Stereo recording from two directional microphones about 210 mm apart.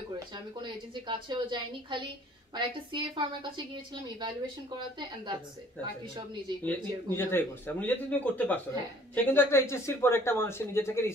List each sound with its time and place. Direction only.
0.6 s a woman's voice: 25° right (ahead or behind)
6.6 s speech: 10° left (ahead or behind)